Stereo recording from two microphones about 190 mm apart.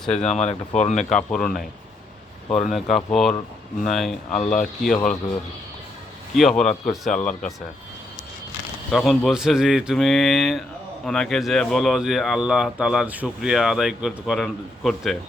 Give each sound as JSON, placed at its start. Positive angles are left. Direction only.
{"t": 0.2, "sound": "speech", "side_deg": 35}
{"t": 1.1, "sound": "speech", "side_deg": 5}
{"t": 2.6, "sound": "speech", "side_deg": 0}
{"t": 6.3, "sound": "speech", "side_deg": 0}
{"t": 8.9, "sound": "speech", "side_deg": 0}